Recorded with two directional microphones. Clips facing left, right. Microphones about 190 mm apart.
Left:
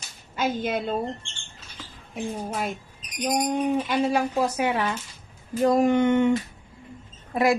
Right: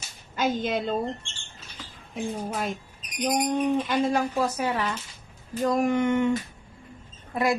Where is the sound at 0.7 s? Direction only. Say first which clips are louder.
Even; 10° left (ahead or behind).